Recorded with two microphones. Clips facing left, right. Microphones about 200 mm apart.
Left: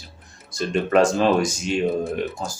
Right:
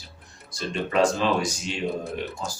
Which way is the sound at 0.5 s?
50° left (ahead or behind).